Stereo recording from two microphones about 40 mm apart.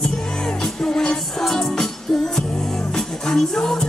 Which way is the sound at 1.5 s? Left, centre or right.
Centre.